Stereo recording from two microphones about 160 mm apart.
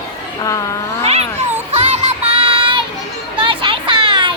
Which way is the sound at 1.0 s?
40° right (ahead or behind).